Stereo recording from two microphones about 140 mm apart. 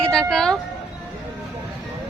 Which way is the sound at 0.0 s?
5° left (ahead or behind).